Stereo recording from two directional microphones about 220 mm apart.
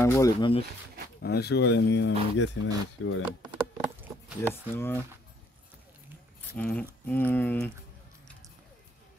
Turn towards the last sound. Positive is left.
turn(degrees=10)  # may be behind; listen again after turning